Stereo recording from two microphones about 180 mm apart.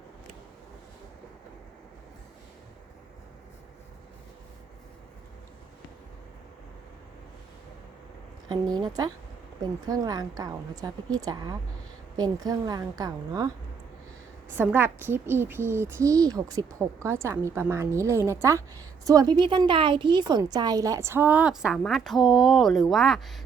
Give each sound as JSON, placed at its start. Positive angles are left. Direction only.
{"t": 8.7, "sound": "a woman's voice", "side_deg": -20}
{"t": 14.5, "sound": "a woman's voice", "side_deg": -10}